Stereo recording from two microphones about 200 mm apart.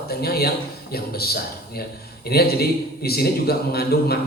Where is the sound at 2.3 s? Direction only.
50° left (ahead or behind).